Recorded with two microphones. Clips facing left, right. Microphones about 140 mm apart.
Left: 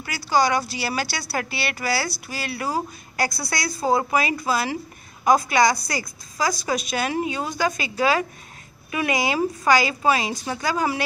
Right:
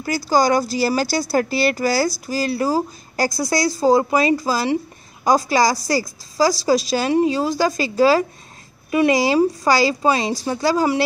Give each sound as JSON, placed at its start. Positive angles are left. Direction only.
{"t": 0.0, "sound": "speech", "side_deg": -40}